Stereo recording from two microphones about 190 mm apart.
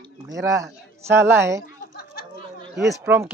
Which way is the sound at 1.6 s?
50° left (ahead or behind).